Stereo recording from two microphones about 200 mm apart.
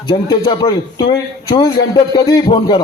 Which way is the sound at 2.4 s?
25° left (ahead or behind).